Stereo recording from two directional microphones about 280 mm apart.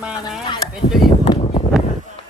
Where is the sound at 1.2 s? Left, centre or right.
Centre.